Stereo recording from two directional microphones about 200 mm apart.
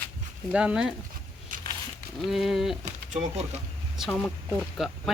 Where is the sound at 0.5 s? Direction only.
5° right (ahead or behind).